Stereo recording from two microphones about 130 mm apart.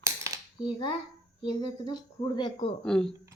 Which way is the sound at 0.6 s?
35° left (ahead or behind).